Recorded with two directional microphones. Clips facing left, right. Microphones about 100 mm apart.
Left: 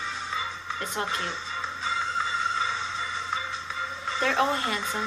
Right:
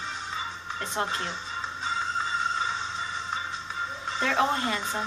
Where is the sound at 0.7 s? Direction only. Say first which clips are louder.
Right 1 dB; 25° right (ahead or behind).